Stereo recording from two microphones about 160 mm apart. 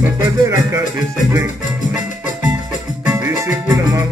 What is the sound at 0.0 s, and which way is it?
Music, 15° right (ahead or behind).